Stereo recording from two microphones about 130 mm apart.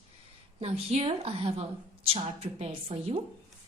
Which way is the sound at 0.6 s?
50° right (ahead or behind).